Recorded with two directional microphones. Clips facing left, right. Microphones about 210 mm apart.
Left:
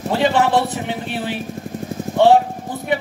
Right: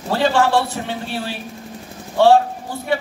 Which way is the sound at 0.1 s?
20° left (ahead or behind).